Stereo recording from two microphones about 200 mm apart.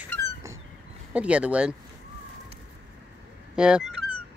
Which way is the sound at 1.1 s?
5° right (ahead or behind).